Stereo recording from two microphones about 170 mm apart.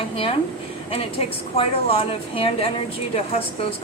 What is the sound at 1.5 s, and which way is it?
Speech, 35° left (ahead or behind).